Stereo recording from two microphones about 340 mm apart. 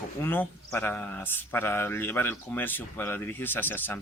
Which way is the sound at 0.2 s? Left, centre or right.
Centre.